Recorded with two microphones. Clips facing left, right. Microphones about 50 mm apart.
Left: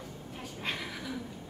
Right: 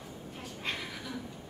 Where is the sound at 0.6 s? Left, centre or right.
Centre.